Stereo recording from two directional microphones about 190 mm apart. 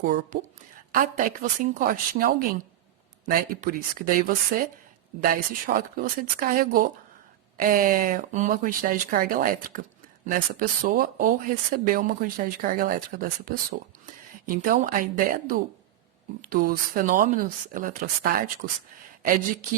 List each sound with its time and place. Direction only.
0.0 s speech: 50° right (ahead or behind)